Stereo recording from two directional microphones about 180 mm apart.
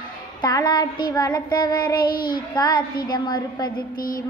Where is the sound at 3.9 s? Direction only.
50° left (ahead or behind).